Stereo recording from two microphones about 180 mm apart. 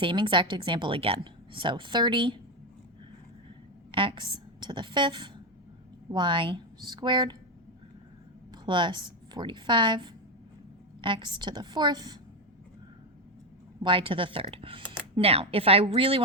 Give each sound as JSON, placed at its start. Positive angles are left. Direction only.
{"t": 0.0, "sound": "a woman's voice", "side_deg": -25}
{"t": 3.9, "sound": "a woman's voice", "side_deg": -25}
{"t": 8.6, "sound": "a woman's voice", "side_deg": -25}
{"t": 13.8, "sound": "a woman's voice", "side_deg": -30}